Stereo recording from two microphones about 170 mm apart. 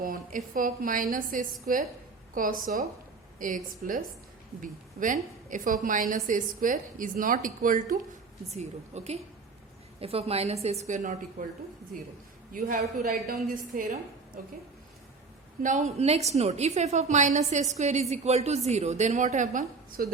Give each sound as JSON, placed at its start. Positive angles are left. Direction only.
{"t": 0.0, "sound": "a woman's voice", "side_deg": -55}
{"t": 8.4, "sound": "a woman's voice", "side_deg": -40}
{"t": 12.5, "sound": "a woman's voice", "side_deg": -55}
{"t": 15.6, "sound": "a woman's voice", "side_deg": -45}